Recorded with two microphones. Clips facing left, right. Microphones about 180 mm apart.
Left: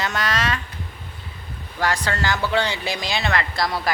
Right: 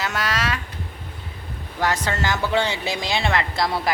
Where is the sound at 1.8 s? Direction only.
20° right (ahead or behind).